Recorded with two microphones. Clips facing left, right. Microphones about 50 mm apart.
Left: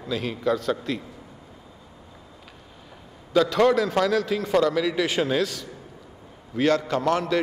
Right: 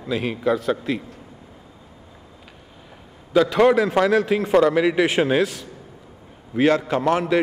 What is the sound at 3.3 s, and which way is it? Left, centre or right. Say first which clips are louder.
A man's voice: right 3 dB; centre.